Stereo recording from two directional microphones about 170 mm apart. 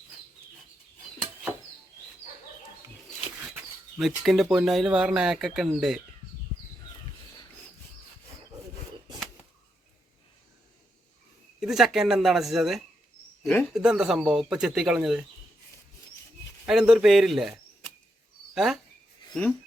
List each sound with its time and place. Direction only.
3.4 s speech: 5° right (ahead or behind)
11.6 s speech: 5° right (ahead or behind)
13.4 s speech: 10° left (ahead or behind)
13.7 s speech: 5° right (ahead or behind)
16.6 s speech: 5° right (ahead or behind)